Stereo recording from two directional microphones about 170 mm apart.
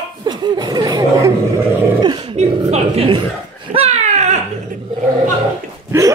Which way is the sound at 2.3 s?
40° right (ahead or behind).